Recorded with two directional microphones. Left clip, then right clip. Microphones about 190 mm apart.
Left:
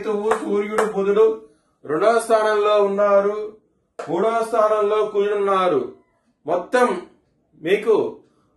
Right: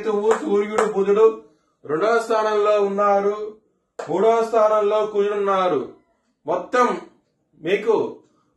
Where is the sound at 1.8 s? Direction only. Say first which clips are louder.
Left 2 dB; 30° left (ahead or behind).